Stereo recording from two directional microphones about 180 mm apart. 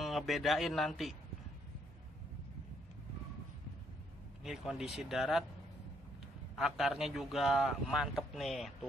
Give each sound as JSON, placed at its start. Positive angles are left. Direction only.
{"t": 0.0, "sound": "a man's voice", "side_deg": 0}
{"t": 4.4, "sound": "a man's voice", "side_deg": 0}
{"t": 6.5, "sound": "a man's voice", "side_deg": 0}